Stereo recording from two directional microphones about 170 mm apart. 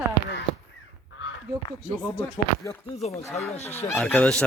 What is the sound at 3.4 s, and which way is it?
Speech, 40° left (ahead or behind).